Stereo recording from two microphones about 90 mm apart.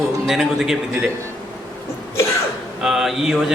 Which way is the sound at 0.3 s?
5° right (ahead or behind).